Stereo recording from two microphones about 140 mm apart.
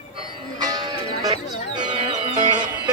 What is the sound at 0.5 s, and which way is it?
Music, 30° right (ahead or behind).